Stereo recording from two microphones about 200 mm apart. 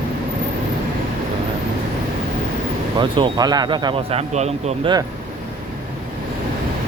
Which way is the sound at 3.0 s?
25° right (ahead or behind).